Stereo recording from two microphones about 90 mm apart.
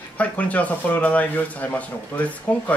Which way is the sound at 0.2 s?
15° left (ahead or behind).